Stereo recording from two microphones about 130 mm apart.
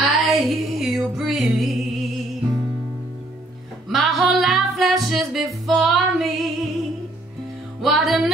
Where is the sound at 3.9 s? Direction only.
Centre (ahead or behind).